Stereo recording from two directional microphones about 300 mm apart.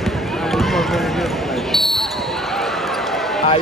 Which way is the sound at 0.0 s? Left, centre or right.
Centre.